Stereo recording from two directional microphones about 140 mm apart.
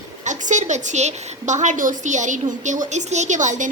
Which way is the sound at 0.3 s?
60° right (ahead or behind).